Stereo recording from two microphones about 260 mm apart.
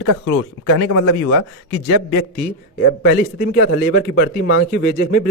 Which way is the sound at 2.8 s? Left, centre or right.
Left.